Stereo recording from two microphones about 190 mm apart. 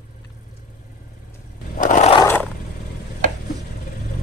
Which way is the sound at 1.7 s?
45° left (ahead or behind).